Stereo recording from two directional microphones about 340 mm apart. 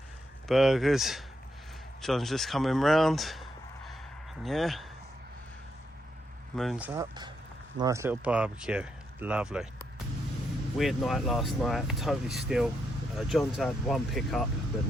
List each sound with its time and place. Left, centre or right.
0.4 s speech: centre
4.4 s speech: centre
6.6 s speech: centre